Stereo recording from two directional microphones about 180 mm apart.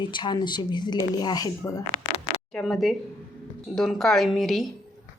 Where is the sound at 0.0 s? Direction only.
25° left (ahead or behind).